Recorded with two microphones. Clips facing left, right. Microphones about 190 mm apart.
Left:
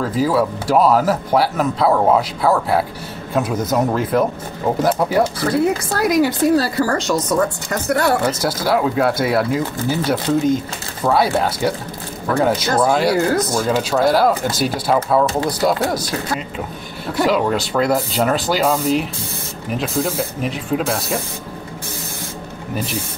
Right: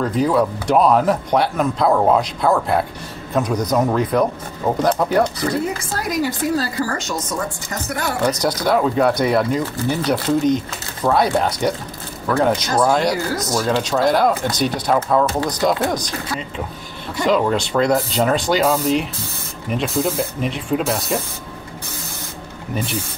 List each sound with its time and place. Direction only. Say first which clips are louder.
0.0 s speech: even; 5° left (ahead or behind)
5.9 s a woman's voice: left 5 dB; 70° left (ahead or behind)
8.3 s speech: even; 5° left (ahead or behind)
17.2 s speech: even; 5° left (ahead or behind)